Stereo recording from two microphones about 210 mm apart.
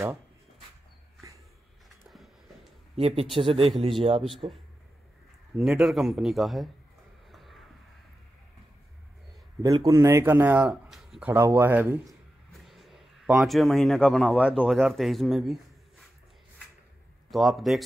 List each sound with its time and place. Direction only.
2.0 s a sound: centre (ahead or behind)
3.0 s a man's voice: 30° right (ahead or behind)
5.6 s speech: centre (ahead or behind)
7.2 s a sound: centre (ahead or behind)
9.6 s a man's voice: 15° right (ahead or behind); by 15.5 s centre (ahead or behind)
17.3 s speech: centre (ahead or behind)